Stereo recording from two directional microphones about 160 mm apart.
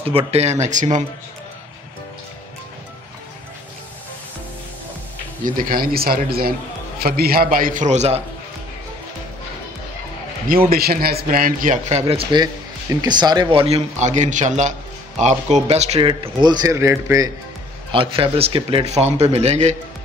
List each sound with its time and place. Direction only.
0.0 s a man's voice: 35° right (ahead or behind)
5.4 s a man's voice: 60° right (ahead or behind)
10.7 s a man's voice: 70° right (ahead or behind); by 12.0 s 55° right (ahead or behind)
12.1 s a man's voice: 30° right (ahead or behind)
16.3 s a man's voice: 25° right (ahead or behind)
17.9 s a man's voice: 35° right (ahead or behind)